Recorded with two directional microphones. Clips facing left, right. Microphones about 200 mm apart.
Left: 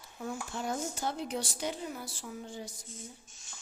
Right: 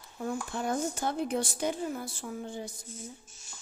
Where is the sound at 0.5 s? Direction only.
55° right (ahead or behind).